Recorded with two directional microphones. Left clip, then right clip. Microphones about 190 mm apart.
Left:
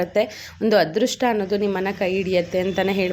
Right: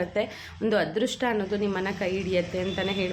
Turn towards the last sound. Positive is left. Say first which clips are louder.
# left 7 dB
turn(degrees=35)  # may be behind; listen again after turning